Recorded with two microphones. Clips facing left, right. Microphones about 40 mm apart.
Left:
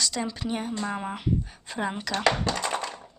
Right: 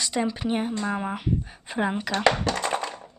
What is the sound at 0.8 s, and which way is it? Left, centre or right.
Speech, centre.